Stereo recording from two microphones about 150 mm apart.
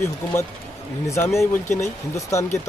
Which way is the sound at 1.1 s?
20° left (ahead or behind).